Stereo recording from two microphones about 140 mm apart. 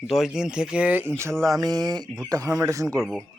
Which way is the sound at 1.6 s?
30° right (ahead or behind).